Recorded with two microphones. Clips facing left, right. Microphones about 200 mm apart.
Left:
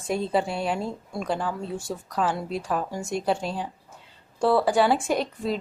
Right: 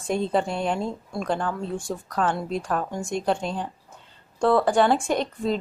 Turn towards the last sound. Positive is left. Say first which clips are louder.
# right 1 dB
turn(degrees=5)  # may be behind; listen again after turning